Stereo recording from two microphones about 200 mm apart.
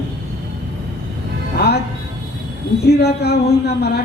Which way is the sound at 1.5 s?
55° left (ahead or behind).